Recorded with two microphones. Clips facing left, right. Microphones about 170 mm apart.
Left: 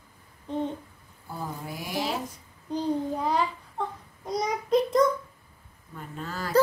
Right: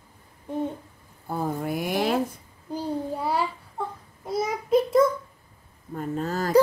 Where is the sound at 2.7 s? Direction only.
10° right (ahead or behind).